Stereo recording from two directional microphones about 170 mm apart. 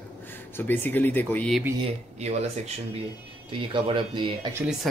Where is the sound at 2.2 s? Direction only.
40° right (ahead or behind).